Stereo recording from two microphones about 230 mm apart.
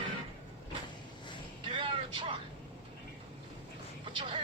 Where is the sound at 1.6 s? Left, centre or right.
Right.